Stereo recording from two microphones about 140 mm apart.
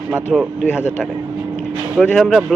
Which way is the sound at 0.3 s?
10° right (ahead or behind).